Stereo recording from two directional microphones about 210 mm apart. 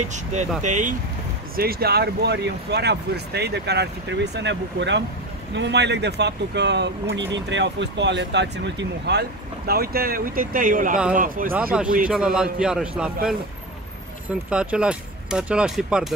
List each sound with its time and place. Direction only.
0.1 s speech: 35° right (ahead or behind)
1.6 s speech: 45° right (ahead or behind)
11.5 s speech: 5° right (ahead or behind)
14.5 s speech: 5° right (ahead or behind)